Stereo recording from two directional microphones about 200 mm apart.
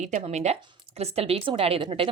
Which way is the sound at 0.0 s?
35° right (ahead or behind).